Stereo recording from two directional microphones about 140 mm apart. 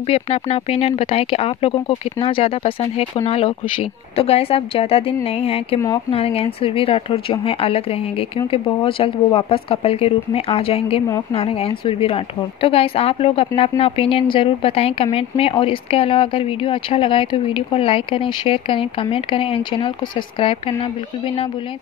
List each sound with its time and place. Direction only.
0.1 s speech: 45° left (ahead or behind)